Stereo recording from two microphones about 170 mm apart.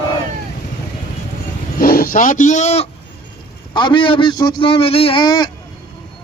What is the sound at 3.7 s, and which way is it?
Speech, 25° left (ahead or behind).